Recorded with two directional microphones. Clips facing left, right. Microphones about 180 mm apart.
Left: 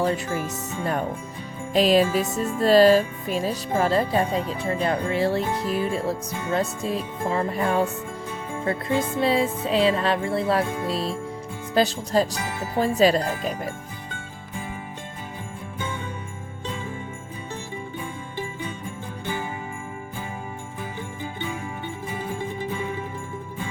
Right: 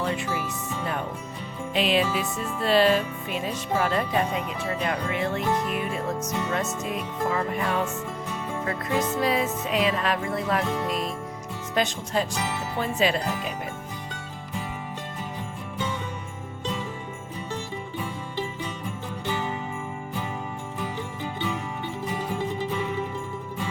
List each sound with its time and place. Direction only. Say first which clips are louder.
0.0 s music: left 4 dB; 45° left (ahead or behind)